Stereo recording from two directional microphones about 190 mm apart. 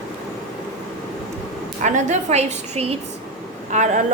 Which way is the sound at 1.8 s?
40° right (ahead or behind).